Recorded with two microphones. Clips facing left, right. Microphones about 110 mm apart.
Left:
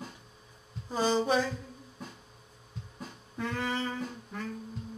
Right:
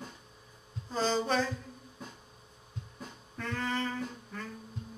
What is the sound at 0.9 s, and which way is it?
Mantra, 15° left (ahead or behind).